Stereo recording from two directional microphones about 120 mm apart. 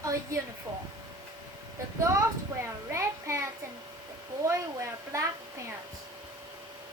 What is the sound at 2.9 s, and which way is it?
A woman's voice, 25° right (ahead or behind).